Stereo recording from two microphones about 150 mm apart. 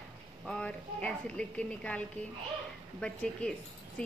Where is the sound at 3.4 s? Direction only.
10° left (ahead or behind).